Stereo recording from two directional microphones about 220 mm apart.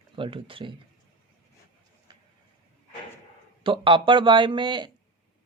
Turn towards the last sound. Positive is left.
turn(degrees=-20)  # may be behind; listen again after turning